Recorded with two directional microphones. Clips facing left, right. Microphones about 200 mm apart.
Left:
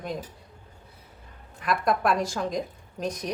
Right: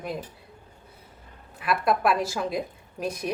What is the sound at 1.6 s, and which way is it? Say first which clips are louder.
A woman's voice: right 1 dB; 5° right (ahead or behind).